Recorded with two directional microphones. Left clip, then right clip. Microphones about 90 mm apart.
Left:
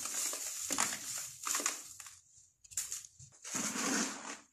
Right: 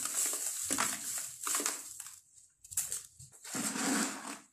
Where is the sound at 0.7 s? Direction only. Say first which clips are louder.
Right 1 dB; 40° left (ahead or behind).